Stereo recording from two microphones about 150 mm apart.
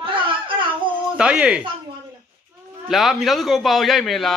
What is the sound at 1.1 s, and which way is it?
Speech, 5° right (ahead or behind).